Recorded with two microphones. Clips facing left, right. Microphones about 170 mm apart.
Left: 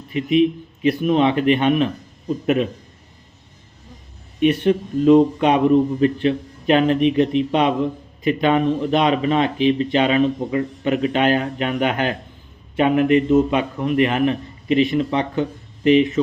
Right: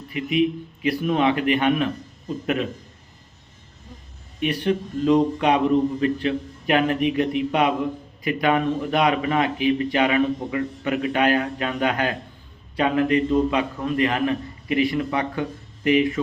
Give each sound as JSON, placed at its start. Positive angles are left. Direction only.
{"t": 0.1, "sound": "speech", "side_deg": 25}
{"t": 4.4, "sound": "speech", "side_deg": 20}